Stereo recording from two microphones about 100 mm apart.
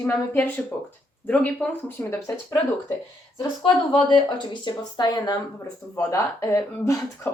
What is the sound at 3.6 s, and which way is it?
Speech, 55° left (ahead or behind).